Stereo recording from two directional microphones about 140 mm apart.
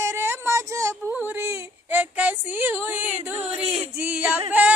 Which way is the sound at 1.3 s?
15° right (ahead or behind).